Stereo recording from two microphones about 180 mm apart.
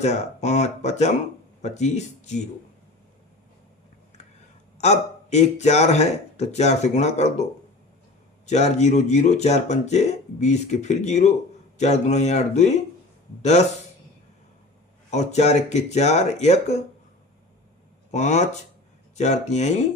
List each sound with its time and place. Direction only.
0.0 s speech: 40° left (ahead or behind)
4.8 s speech: 40° left (ahead or behind)
8.4 s speech: 40° left (ahead or behind)
15.1 s speech: 40° left (ahead or behind)
18.1 s speech: 40° left (ahead or behind)